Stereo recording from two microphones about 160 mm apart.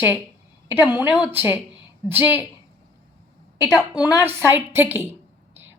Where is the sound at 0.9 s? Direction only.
10° right (ahead or behind).